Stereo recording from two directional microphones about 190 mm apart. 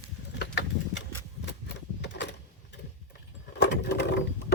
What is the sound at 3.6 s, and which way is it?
Sewing machine, 60° left (ahead or behind).